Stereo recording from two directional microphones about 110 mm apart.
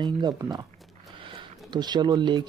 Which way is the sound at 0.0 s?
40° right (ahead or behind).